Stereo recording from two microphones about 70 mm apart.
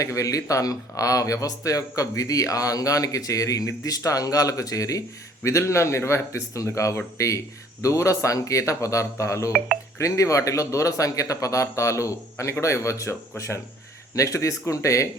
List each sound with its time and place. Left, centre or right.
0.0 s speech: left